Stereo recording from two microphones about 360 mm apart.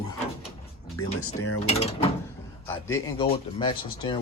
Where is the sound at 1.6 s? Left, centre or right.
Centre.